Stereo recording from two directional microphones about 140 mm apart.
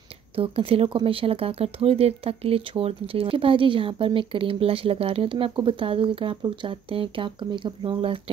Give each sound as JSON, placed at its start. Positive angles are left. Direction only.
{"t": 0.4, "sound": "speech", "side_deg": -40}